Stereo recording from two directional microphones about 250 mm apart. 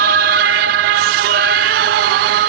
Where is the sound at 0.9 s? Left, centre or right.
Right.